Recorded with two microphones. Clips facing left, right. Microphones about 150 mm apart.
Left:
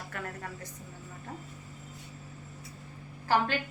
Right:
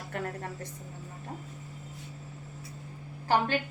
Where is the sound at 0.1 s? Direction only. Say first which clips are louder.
Right 6 dB; 30° right (ahead or behind).